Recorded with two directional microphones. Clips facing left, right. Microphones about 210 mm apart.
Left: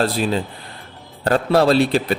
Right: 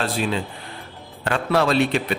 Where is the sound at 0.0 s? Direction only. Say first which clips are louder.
Left 4 dB; 40° left (ahead or behind).